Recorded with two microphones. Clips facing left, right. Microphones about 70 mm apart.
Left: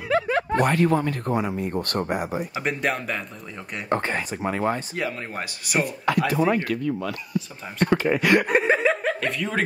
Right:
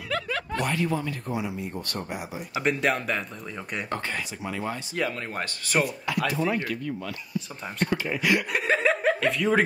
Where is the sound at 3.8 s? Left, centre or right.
Left.